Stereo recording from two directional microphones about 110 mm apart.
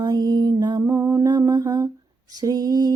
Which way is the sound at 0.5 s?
40° right (ahead or behind).